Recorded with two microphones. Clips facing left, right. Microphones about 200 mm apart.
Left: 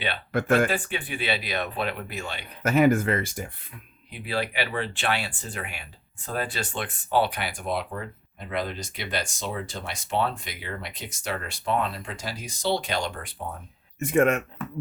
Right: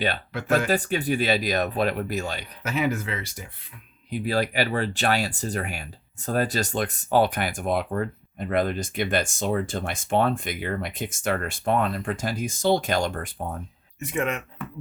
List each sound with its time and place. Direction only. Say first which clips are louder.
0.3 s speech: left 7 dB; 50° left (ahead or behind)
0.7 s speech: right 6 dB; 40° right (ahead or behind)
2.6 s speech: left 6 dB; 50° left (ahead or behind)
4.1 s speech: right 5 dB; 40° right (ahead or behind)
14.0 s speech: left 6 dB; 50° left (ahead or behind)